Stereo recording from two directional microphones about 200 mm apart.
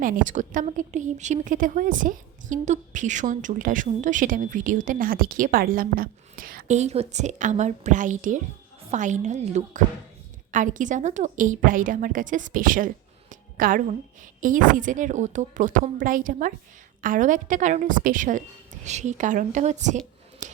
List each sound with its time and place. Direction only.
0.0 s a woman's voice: 40° right (ahead or behind)
20.4 s scissors: 40° right (ahead or behind)